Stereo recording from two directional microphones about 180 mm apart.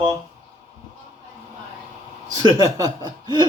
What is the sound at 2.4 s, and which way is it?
Chuckle, 20° right (ahead or behind).